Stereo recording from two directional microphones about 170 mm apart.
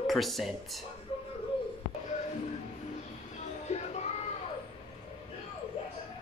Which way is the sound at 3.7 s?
40° left (ahead or behind).